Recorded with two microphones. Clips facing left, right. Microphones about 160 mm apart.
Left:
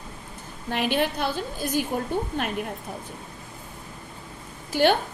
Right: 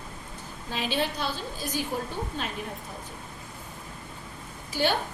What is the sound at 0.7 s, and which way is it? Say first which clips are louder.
Speech: left 5 dB; 55° left (ahead or behind).